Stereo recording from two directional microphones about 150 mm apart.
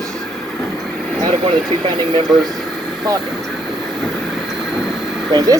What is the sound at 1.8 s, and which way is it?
Speech, 30° right (ahead or behind).